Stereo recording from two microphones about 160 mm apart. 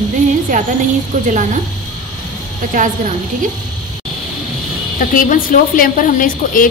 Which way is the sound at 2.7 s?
55° right (ahead or behind).